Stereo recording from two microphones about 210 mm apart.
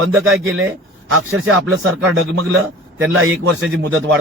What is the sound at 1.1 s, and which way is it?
Speech, 75° right (ahead or behind).